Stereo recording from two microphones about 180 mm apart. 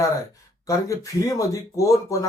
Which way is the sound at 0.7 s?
15° left (ahead or behind).